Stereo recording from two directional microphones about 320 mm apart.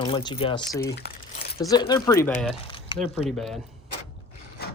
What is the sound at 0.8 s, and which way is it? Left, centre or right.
Speech, left.